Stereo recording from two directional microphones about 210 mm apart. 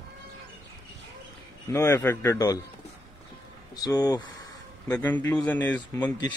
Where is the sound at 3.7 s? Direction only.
15° left (ahead or behind).